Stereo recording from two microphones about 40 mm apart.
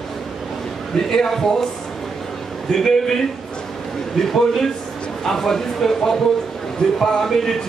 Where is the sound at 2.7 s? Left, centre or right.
Centre.